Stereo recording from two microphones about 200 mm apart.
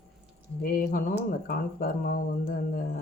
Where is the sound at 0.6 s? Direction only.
45° left (ahead or behind).